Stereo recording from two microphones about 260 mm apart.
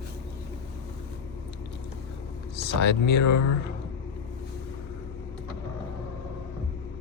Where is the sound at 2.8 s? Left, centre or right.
Left.